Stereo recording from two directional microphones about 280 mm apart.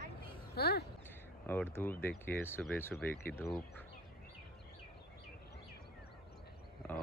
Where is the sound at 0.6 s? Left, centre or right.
Left.